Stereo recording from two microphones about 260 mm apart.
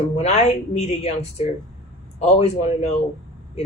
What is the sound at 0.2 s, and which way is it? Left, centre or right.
Speech, left.